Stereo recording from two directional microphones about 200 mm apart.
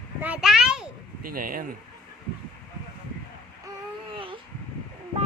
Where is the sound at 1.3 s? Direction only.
45° right (ahead or behind).